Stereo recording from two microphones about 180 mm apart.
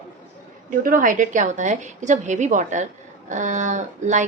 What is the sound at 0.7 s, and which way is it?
A woman's voice, 50° right (ahead or behind).